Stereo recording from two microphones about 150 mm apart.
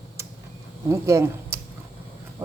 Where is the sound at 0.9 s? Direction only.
20° right (ahead or behind).